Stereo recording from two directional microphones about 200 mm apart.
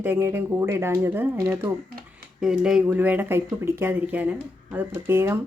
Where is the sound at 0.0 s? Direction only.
10° right (ahead or behind).